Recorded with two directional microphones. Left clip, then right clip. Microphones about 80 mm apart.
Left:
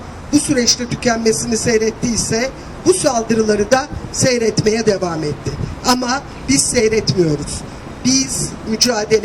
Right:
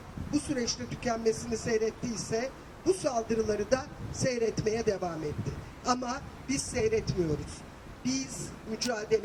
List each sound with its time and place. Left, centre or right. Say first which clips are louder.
0.3 s speech: left 17 dB; left